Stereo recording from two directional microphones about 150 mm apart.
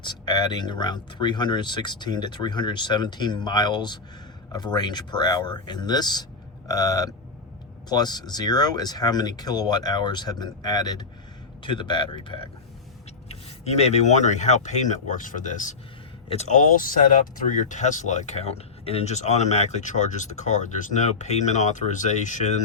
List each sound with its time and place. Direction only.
0.0 s speech: 30° left (ahead or behind)
13.2 s speech: 45° left (ahead or behind)
16.3 s speech: 45° left (ahead or behind)
16.7 s speech: 60° left (ahead or behind)